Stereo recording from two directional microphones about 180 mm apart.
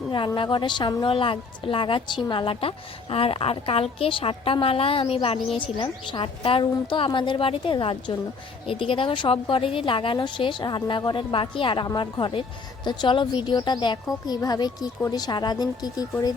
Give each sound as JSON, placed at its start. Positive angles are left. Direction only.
{"t": 0.1, "sound": "a woman's voice", "side_deg": 25}